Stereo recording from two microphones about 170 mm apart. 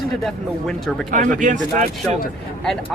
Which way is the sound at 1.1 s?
50° right (ahead or behind).